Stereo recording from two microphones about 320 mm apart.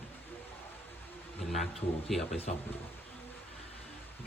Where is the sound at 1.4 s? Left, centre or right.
Centre.